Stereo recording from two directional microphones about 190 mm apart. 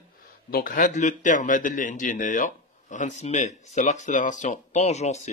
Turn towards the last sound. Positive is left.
turn(degrees=35)  # may be behind; listen again after turning